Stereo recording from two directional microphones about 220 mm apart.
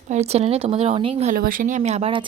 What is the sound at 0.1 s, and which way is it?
Speech, 30° right (ahead or behind).